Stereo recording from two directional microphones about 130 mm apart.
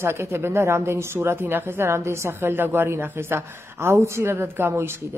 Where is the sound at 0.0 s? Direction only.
20° right (ahead or behind).